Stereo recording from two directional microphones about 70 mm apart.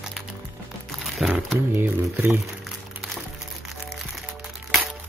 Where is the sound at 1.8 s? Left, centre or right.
Right.